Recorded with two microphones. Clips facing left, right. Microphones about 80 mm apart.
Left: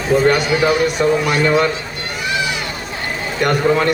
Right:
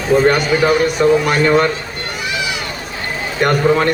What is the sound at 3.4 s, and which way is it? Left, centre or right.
Speech, right.